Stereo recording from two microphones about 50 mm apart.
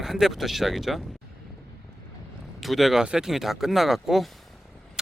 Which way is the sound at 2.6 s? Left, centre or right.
Centre.